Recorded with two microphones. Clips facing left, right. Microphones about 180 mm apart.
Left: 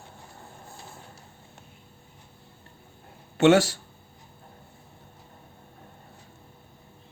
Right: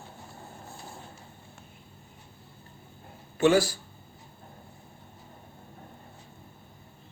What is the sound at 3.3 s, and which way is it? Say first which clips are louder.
Speech: left 4 dB; 75° left (ahead or behind).